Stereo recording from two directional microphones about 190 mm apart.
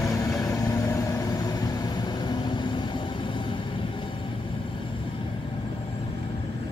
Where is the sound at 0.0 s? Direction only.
15° left (ahead or behind).